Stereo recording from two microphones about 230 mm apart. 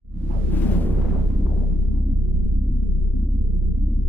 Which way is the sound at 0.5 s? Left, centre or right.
Centre.